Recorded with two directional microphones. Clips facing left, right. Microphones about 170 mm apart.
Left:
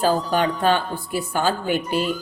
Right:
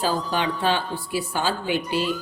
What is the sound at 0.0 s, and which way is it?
A woman's voice, 50° left (ahead or behind).